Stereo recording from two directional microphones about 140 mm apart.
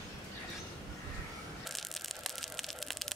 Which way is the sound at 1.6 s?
Centre (ahead or behind).